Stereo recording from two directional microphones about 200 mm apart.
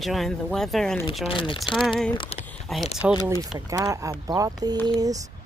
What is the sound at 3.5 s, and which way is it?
Speech, 20° right (ahead or behind).